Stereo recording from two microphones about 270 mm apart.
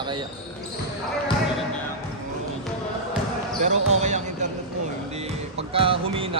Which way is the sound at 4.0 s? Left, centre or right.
Right.